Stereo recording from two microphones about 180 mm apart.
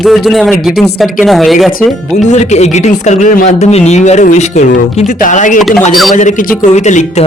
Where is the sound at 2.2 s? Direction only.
40° left (ahead or behind).